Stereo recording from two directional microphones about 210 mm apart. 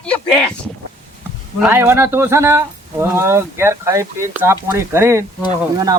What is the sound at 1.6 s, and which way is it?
Speech, 10° right (ahead or behind).